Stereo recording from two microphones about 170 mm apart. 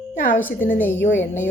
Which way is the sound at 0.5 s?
55° left (ahead or behind).